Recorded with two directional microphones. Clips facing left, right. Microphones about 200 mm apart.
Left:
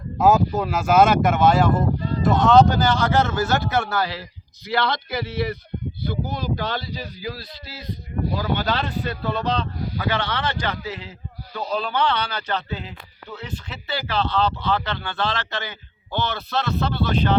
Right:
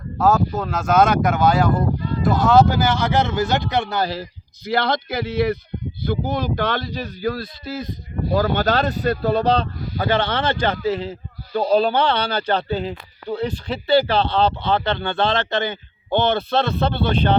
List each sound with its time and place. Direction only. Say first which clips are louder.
0.2 s speech: left 1 dB; 15° left (ahead or behind)
2.0 s a sound: right 1 dB; 35° left (ahead or behind)
2.2 s speech: even; centre (ahead or behind); by 4.0 s 20° right (ahead or behind)
4.0 s speech: right 4 dB; 45° right (ahead or behind)